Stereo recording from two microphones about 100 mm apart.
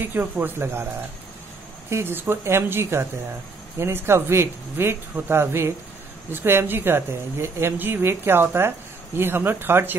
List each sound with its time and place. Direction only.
0.0 s a woman's voice: 20° right (ahead or behind)
1.9 s a woman's voice: 25° right (ahead or behind)